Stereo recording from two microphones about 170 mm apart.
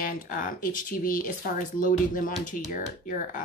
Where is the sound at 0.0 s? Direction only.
55° left (ahead or behind).